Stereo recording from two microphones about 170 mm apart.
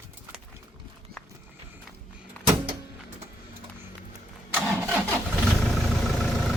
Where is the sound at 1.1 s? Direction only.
65° right (ahead or behind).